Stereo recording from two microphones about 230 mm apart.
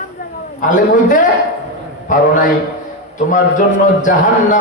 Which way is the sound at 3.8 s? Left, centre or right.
Left.